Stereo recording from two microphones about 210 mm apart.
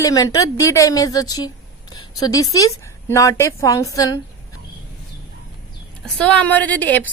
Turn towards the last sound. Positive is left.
turn(degrees=10)  # may be behind; listen again after turning